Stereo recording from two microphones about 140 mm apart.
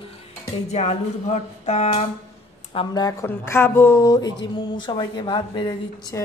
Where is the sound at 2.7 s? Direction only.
30° left (ahead or behind).